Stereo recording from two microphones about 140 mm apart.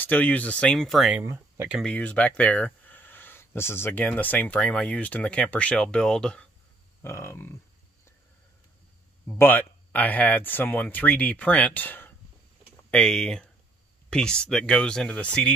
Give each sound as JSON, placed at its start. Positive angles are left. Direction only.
{"t": 0.0, "sound": "speech", "side_deg": 10}
{"t": 1.2, "sound": "speech", "side_deg": -20}
{"t": 1.9, "sound": "speech", "side_deg": 10}
{"t": 7.0, "sound": "speech", "side_deg": 20}
{"t": 9.3, "sound": "speech", "side_deg": 15}